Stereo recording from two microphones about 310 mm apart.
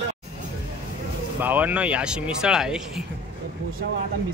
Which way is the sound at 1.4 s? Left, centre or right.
Centre.